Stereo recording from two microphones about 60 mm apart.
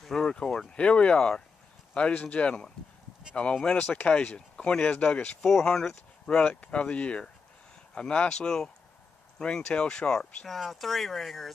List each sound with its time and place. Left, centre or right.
0.0 s speech: centre; by 4.1 s left
4.1 s speech: centre
5.4 s speech: centre